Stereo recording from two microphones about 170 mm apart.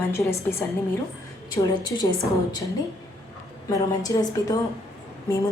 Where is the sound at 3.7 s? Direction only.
20° left (ahead or behind).